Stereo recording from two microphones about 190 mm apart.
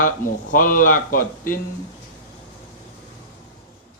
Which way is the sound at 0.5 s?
45° left (ahead or behind).